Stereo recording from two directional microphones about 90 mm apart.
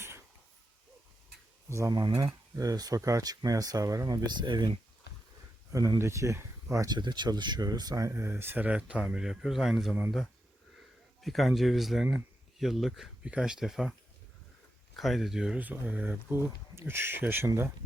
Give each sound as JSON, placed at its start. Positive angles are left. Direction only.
{"t": 1.9, "sound": "speech", "side_deg": -50}
{"t": 6.0, "sound": "speech", "side_deg": -30}
{"t": 6.9, "sound": "speech", "side_deg": -55}
{"t": 11.2, "sound": "speech", "side_deg": 0}
{"t": 14.9, "sound": "speech", "side_deg": 0}
{"t": 15.5, "sound": "speech", "side_deg": -20}